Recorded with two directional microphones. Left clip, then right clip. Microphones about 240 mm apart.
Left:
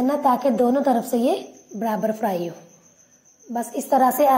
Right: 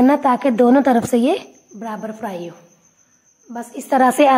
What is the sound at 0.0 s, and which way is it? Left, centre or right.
A woman's voice, right.